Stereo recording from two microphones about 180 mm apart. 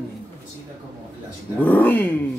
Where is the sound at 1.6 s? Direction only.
10° left (ahead or behind).